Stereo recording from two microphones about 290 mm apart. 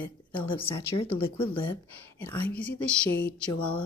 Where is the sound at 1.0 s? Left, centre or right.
Centre.